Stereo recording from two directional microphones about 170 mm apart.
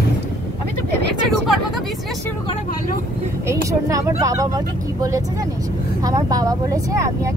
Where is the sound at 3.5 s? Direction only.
20° right (ahead or behind).